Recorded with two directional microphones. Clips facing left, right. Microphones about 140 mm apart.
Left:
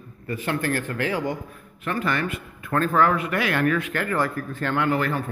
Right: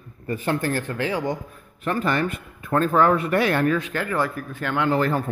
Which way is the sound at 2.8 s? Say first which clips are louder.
Right 1 dB; 20° right (ahead or behind).